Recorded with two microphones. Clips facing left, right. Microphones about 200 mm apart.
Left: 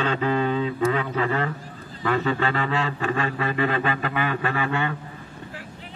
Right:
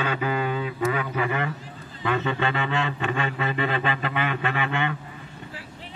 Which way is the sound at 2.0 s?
20° right (ahead or behind).